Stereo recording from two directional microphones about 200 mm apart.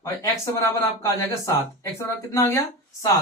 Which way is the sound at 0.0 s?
15° left (ahead or behind).